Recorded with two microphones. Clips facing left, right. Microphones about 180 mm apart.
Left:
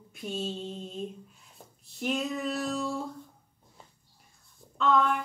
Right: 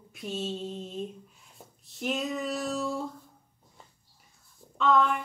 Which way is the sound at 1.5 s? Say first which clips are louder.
Right 1 dB; centre (ahead or behind).